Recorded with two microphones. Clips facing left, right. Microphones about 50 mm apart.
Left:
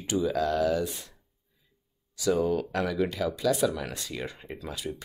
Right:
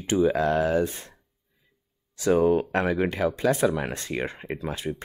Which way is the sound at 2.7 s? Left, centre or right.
Right.